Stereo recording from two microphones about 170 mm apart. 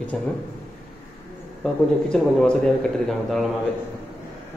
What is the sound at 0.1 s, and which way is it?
Speech, 5° left (ahead or behind).